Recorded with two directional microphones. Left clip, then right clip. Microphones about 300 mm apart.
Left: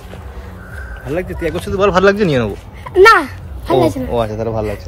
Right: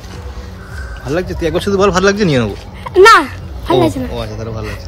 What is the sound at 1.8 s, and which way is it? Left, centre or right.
Speech, centre.